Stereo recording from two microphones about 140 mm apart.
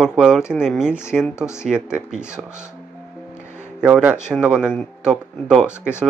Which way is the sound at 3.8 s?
10° right (ahead or behind).